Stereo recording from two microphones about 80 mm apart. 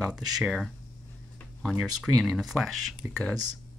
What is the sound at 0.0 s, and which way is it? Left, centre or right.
Speech, centre.